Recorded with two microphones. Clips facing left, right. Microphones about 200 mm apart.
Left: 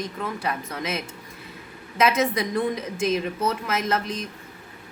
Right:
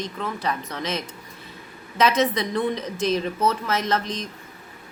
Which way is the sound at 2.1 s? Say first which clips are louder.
Right 1 dB; 10° left (ahead or behind).